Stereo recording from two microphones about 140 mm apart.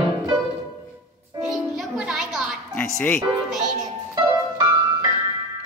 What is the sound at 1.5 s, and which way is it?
Music, centre (ahead or behind).